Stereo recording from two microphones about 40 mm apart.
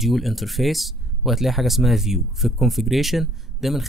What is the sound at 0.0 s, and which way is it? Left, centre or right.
Speech, centre.